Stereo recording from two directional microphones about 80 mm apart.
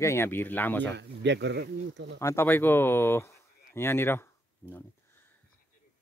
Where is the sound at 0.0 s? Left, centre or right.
Left.